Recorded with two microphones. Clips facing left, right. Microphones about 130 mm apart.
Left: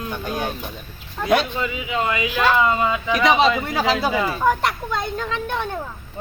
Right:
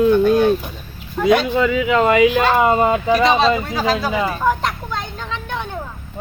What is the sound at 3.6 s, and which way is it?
Speech, 20° left (ahead or behind).